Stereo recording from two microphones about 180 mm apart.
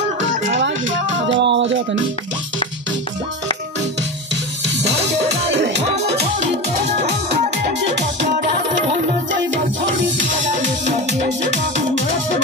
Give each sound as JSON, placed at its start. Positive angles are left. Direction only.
{"t": 0.6, "sound": "music", "side_deg": -90}